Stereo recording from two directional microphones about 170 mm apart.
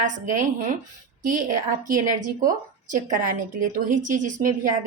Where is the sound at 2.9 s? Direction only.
50° right (ahead or behind).